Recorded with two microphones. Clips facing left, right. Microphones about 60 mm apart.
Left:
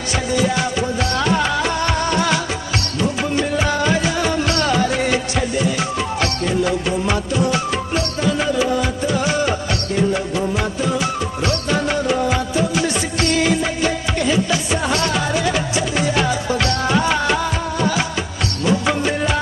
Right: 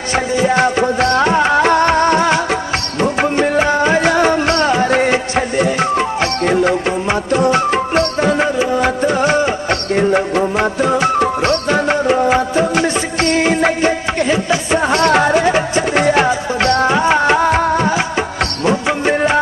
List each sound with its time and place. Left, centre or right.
0.1 s music: right
0.6 s music: right
3.0 s music: right
3.6 s music: right
4.0 s music: right
15.0 s music: right
16.3 s music: right
17.5 s music: right
19.0 s music: right